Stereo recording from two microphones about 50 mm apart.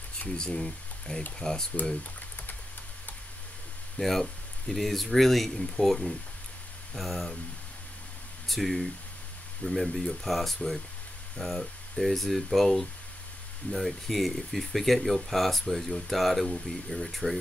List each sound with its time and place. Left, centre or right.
0.4 s speech: centre
4.0 s speech: centre
8.5 s speech: centre